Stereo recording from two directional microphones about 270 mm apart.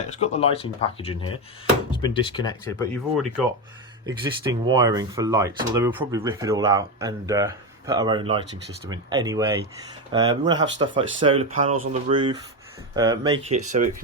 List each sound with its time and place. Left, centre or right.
0.1 s speech: left
3.2 s speech: centre
4.0 s speech: centre